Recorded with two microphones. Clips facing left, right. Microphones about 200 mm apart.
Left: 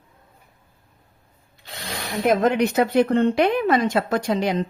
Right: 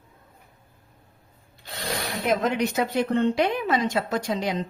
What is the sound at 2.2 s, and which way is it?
Speech, 55° left (ahead or behind).